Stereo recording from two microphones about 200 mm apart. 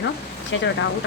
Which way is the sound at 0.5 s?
70° left (ahead or behind).